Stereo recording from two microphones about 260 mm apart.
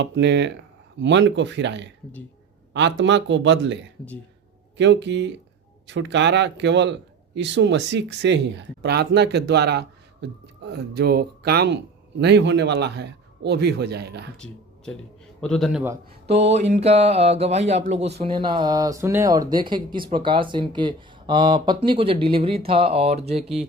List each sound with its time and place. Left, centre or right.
0.0 s speech: right
4.8 s speech: right
14.3 s a man's voice: centre
16.2 s speech: right